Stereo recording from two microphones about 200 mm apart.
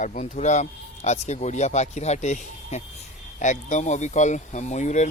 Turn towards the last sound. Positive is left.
turn(degrees=35)  # may be behind; listen again after turning